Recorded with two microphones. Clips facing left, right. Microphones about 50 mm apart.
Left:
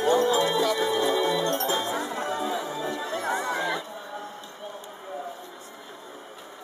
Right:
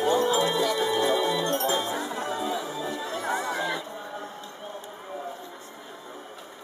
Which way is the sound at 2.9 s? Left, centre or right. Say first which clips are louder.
Left 1 dB; centre.